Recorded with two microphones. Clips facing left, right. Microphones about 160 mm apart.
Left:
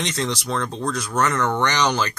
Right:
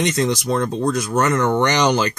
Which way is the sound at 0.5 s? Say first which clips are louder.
Right 6 dB; 10° right (ahead or behind).